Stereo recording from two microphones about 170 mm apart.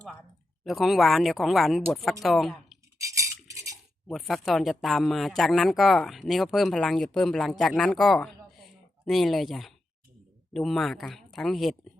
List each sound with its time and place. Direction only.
0.6 s speech: centre (ahead or behind)
3.0 s cutlery: 20° right (ahead or behind)
4.1 s a woman's voice: centre (ahead or behind)